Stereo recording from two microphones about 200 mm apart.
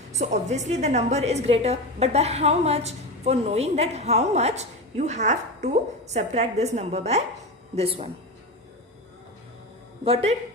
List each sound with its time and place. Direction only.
0.1 s a woman's voice: 35° right (ahead or behind)
10.0 s a woman's voice: 30° right (ahead or behind)